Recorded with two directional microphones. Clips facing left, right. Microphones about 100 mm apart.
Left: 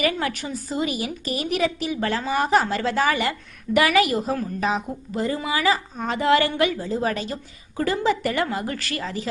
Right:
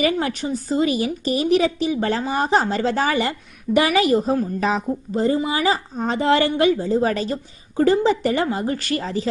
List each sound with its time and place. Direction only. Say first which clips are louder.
0.0 s a woman's voice: right 3 dB; 25° right (ahead or behind)